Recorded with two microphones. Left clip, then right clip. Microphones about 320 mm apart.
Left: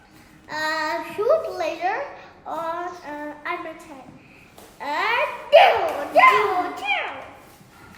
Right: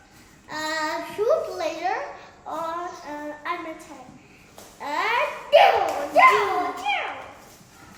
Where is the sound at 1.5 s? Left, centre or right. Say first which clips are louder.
Left 2 dB; centre.